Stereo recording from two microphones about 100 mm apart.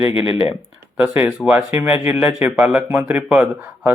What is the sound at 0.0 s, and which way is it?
Speech, 65° left (ahead or behind).